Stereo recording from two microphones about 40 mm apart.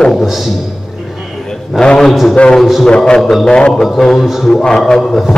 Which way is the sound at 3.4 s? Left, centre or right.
Left.